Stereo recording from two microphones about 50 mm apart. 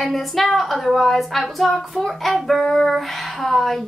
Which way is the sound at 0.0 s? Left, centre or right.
Centre.